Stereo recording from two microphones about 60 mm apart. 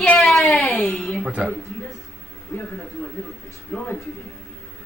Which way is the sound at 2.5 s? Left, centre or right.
Left.